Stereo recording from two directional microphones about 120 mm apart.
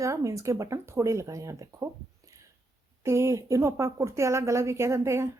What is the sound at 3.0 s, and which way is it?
A woman's voice, 20° right (ahead or behind).